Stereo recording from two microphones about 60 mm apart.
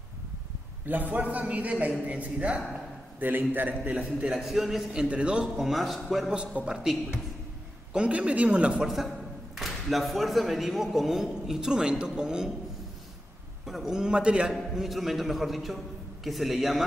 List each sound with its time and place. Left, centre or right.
0.8 s a man's voice: right
3.2 s a man's voice: right
4.3 s a man's voice: centre
5.0 s a man's voice: centre
5.6 s a man's voice: centre
6.3 s a man's voice: centre
7.9 s a man's voice: centre
13.7 s a man's voice: centre
14.5 s a man's voice: centre